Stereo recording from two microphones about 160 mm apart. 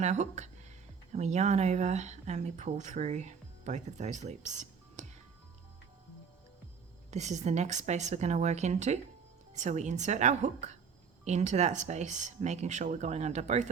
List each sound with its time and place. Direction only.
0.0 s speech: 45° right (ahead or behind)
7.1 s speech: 45° right (ahead or behind)